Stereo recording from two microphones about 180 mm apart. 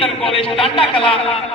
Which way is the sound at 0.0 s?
30° left (ahead or behind).